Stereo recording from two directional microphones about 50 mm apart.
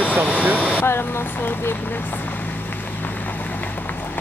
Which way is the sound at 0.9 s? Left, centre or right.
Left.